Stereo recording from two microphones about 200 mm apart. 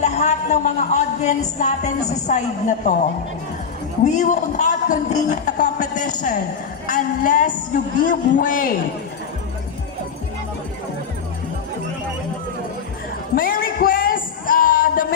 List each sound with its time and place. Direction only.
0.0 s a woman's voice: 35° left (ahead or behind)
4.0 s a woman's voice: 40° left (ahead or behind)
13.3 s a sound: 45° left (ahead or behind)